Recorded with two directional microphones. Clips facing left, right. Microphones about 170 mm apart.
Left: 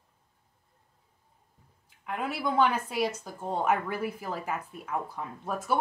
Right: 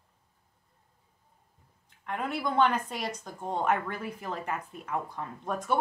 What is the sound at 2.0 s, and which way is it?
A woman's voice, 5° left (ahead or behind).